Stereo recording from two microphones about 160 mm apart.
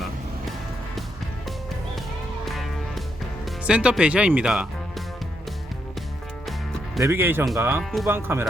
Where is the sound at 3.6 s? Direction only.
5° right (ahead or behind).